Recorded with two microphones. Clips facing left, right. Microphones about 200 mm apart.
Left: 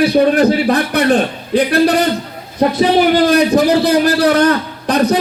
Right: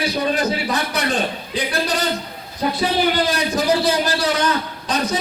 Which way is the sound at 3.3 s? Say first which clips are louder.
Left 8 dB; 60° left (ahead or behind).